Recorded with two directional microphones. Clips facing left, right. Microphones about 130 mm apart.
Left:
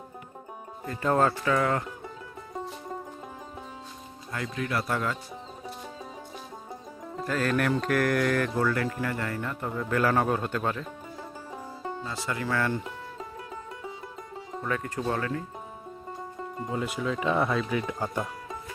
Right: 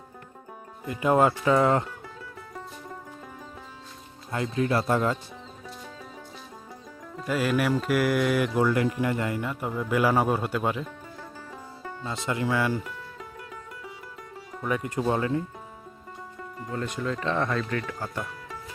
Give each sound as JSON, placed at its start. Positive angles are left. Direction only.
{"t": 0.9, "sound": "speech", "side_deg": -15}
{"t": 1.5, "sound": "speech", "side_deg": -25}
{"t": 4.3, "sound": "speech", "side_deg": -25}
{"t": 7.3, "sound": "speech", "side_deg": -10}
{"t": 11.2, "sound": "music", "side_deg": 20}
{"t": 12.0, "sound": "speech", "side_deg": -20}
{"t": 12.8, "sound": "music", "side_deg": 25}
{"t": 14.6, "sound": "speech", "side_deg": -15}
{"t": 16.4, "sound": "music", "side_deg": 25}
{"t": 16.7, "sound": "speech", "side_deg": 5}